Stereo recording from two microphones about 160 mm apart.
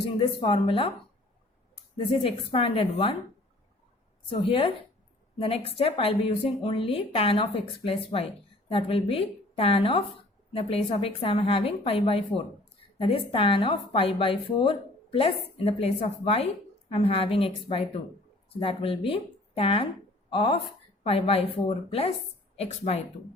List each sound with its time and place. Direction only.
0.0 s a woman's voice: 35° left (ahead or behind)
4.3 s a woman's voice: 35° left (ahead or behind)